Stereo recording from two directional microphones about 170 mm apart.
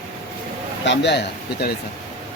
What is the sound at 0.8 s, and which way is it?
Speech, 90° left.